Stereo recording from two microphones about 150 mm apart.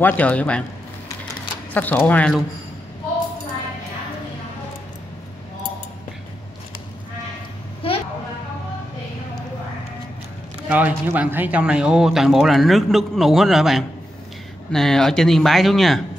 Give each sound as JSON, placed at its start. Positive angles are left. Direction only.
{"t": 0.0, "sound": "speech", "side_deg": 10}
{"t": 1.7, "sound": "speech", "side_deg": 10}
{"t": 7.8, "sound": "a sound", "side_deg": 35}
{"t": 10.7, "sound": "speech", "side_deg": -10}